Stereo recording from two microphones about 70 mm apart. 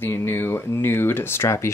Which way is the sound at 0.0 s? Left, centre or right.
Left.